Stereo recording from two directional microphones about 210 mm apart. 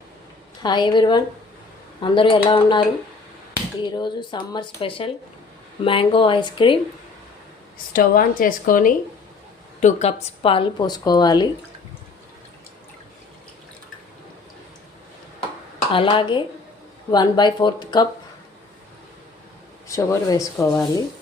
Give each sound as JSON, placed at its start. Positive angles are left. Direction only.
{"t": 0.6, "sound": "speech", "side_deg": 20}
{"t": 3.8, "sound": "speech", "side_deg": 20}
{"t": 7.9, "sound": "a woman's voice", "side_deg": 40}
{"t": 15.9, "sound": "speech", "side_deg": 25}
{"t": 19.9, "sound": "speech", "side_deg": 15}